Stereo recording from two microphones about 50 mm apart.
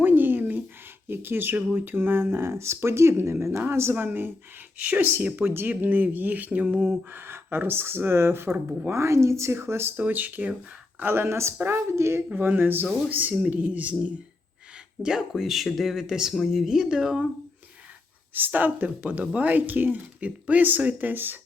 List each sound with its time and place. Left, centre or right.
0.0 s a sound: right
1.0 s speech: right
3.9 s speech: right
7.1 s speech: right
8.9 s a woman's voice: right
9.6 s speech: right
10.0 s speech: right
11.1 s speech: right
11.6 s speech: right
11.9 s a woman's voice: right
12.3 s speech: right
12.5 s speech: right
15.3 s speech: centre
18.3 s speech: right